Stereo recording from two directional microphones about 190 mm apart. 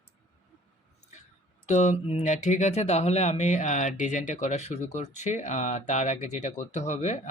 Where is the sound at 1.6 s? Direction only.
35° left (ahead or behind).